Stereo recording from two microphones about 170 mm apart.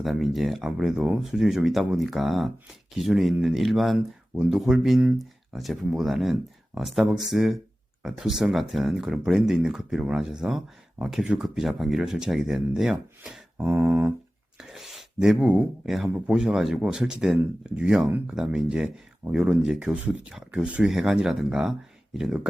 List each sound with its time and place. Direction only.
0.0 s speech: centre (ahead or behind)
13.7 s a sound: 10° right (ahead or behind)
14.6 s speech: centre (ahead or behind)